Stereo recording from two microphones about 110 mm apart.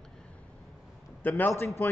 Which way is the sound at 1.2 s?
15° left (ahead or behind).